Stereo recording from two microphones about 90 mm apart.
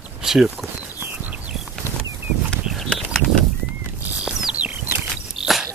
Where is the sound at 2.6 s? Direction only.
5° right (ahead or behind).